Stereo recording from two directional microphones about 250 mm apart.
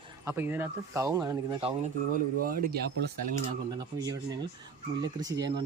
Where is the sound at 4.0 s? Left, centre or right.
Centre.